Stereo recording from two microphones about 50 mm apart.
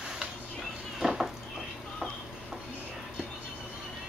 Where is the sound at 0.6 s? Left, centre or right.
Centre.